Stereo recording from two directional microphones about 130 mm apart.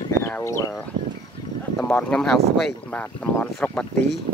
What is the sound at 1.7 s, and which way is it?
Speech, 10° left (ahead or behind).